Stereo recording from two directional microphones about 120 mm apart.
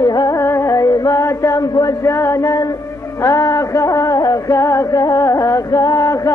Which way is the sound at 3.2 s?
30° left (ahead or behind).